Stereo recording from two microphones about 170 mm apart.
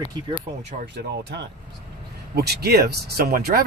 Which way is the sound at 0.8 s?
90° right.